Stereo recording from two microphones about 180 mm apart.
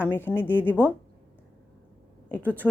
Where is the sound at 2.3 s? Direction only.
10° left (ahead or behind).